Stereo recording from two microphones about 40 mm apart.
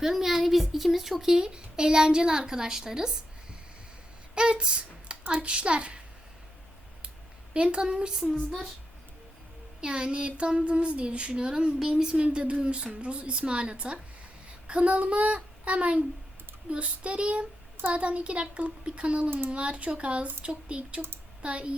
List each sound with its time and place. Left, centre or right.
0.0 s a woman's voice: centre
1.4 s a woman's voice: right
4.4 s speech: right
7.5 s speech: right
9.8 s speech: right